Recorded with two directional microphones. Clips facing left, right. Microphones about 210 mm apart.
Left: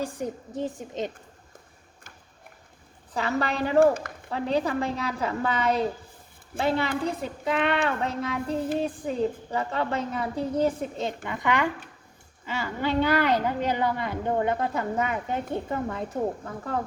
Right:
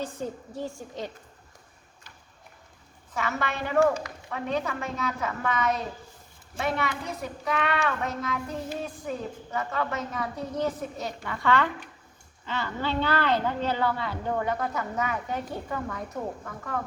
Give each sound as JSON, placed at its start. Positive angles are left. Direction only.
{"t": 0.0, "sound": "a woman's voice", "side_deg": 15}
{"t": 3.2, "sound": "a woman's voice", "side_deg": 35}
{"t": 11.2, "sound": "a woman's voice", "side_deg": 15}